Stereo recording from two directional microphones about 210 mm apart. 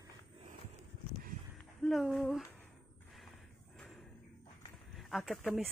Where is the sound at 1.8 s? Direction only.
Centre (ahead or behind).